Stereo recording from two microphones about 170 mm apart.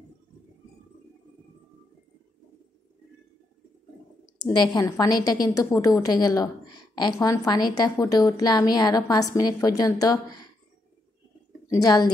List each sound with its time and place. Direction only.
4.4 s a woman's voice: 25° left (ahead or behind)
11.7 s a woman's voice: 25° left (ahead or behind)